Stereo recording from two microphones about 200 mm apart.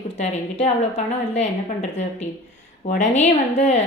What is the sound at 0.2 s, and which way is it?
A woman's voice, 35° left (ahead or behind).